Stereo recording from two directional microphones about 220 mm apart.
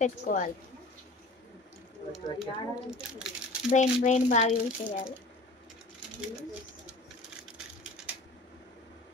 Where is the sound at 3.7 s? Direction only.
30° left (ahead or behind).